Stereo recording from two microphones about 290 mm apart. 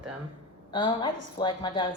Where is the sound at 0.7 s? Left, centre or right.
Centre.